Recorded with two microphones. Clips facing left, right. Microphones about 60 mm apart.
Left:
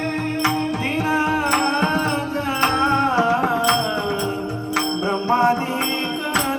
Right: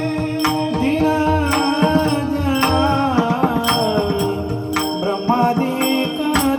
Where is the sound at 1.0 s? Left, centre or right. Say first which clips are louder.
Even; left.